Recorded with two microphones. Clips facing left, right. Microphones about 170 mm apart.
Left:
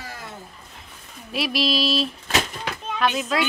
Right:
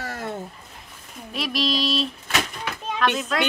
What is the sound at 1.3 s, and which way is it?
Speech, 5° left (ahead or behind).